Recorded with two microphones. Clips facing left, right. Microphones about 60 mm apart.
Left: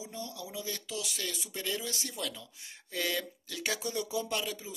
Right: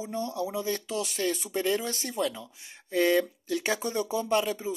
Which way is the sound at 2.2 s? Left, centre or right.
Right.